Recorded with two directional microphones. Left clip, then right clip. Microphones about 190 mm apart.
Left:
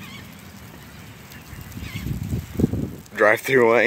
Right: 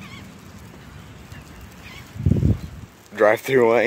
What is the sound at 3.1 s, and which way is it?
Speech, 10° right (ahead or behind).